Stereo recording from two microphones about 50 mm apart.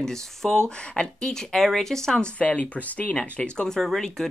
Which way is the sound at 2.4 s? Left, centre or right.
Left.